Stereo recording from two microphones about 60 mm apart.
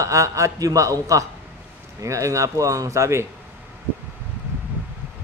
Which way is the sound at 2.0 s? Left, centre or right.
Right.